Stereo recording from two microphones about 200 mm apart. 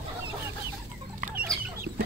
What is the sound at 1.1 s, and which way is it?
Chicken, 45° right (ahead or behind).